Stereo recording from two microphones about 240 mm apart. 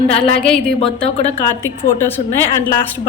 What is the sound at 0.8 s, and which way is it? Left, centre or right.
Speech, left.